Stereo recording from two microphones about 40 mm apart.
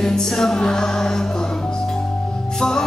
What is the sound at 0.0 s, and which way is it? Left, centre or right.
Music, centre.